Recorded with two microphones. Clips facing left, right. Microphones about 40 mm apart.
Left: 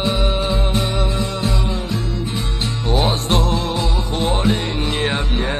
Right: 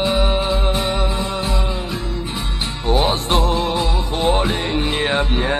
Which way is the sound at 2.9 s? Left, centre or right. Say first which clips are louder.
Right 1 dB; centre.